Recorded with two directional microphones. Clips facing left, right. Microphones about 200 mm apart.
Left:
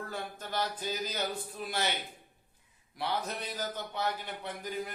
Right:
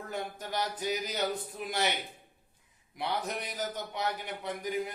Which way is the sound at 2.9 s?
20° right (ahead or behind).